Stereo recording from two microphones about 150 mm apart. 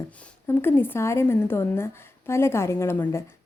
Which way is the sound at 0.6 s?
15° left (ahead or behind).